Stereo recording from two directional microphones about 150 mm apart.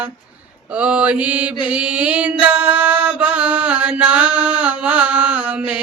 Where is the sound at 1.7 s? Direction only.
10° right (ahead or behind).